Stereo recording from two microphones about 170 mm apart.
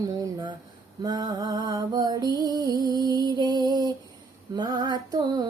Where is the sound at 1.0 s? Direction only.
25° right (ahead or behind).